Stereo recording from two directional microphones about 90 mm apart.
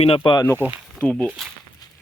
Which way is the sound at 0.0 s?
75° left (ahead or behind).